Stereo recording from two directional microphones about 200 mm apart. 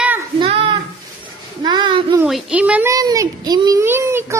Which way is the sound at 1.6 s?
20° right (ahead or behind).